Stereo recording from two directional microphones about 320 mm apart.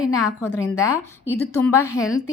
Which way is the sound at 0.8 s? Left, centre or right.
Centre.